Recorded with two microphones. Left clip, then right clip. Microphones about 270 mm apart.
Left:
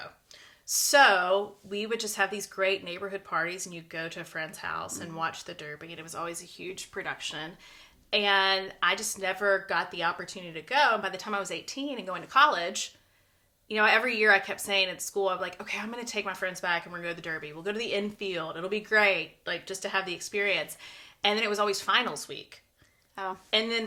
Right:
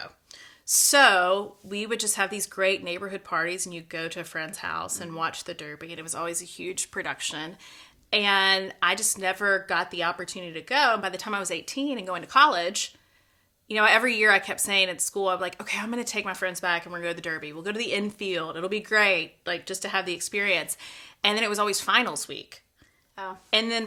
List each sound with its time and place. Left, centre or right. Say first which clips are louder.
0.7 s speech: right 2 dB; right
23.1 s a woman's voice: left 1 dB; centre
23.5 s speech: right 3 dB; right